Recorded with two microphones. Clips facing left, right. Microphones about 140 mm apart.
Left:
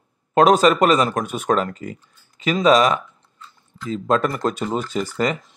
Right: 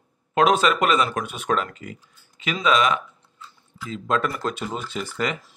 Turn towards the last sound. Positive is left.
turn(degrees=40)  # may be behind; listen again after turning